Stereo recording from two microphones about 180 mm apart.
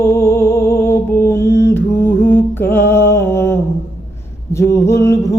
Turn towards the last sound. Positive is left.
turn(degrees=15)  # may be behind; listen again after turning